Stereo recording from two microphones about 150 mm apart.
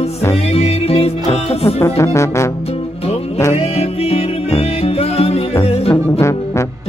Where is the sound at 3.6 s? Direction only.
45° left (ahead or behind).